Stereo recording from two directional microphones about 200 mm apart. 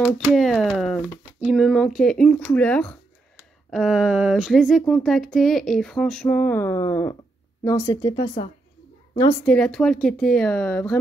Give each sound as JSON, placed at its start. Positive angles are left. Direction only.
{"t": 0.0, "sound": "a woman's voice", "side_deg": 0}
{"t": 9.4, "sound": "speech", "side_deg": 5}